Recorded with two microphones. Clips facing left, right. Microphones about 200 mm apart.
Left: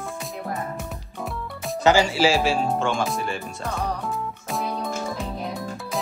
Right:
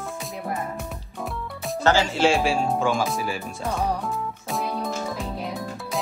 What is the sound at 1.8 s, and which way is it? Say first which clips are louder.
Speech: left 2 dB; 15° left (ahead or behind).